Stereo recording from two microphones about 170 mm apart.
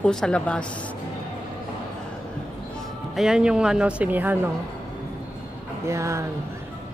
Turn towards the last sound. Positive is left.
turn(degrees=-15)  # may be behind; listen again after turning